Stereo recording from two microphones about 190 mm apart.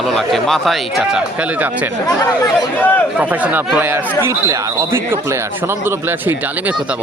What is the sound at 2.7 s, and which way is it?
Speech, 10° left (ahead or behind).